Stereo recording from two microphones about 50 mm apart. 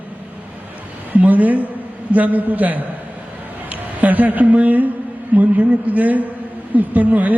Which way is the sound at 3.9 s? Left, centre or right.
Right.